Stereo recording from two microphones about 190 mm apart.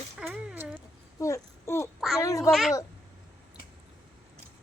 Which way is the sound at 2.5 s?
Centre (ahead or behind).